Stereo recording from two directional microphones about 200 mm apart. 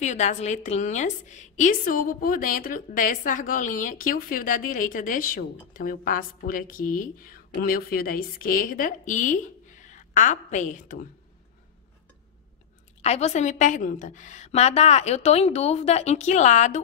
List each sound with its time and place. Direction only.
0.0 s a woman's voice: 35° left (ahead or behind)
13.0 s a woman's voice: 35° left (ahead or behind)